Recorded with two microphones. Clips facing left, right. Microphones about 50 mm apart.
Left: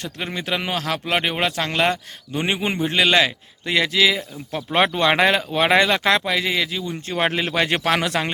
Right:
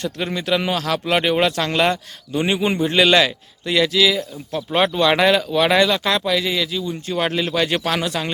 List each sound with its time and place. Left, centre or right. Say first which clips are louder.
0.0 s a man's voice: right 4 dB; centre
2.3 s speech: right 3 dB; left
3.7 s speech: right 2 dB; left
4.7 s speech: right 1 dB; left